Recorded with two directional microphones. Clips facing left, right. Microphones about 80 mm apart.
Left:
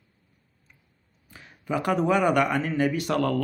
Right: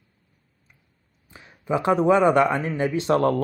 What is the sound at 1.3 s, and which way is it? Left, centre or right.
Speech, right.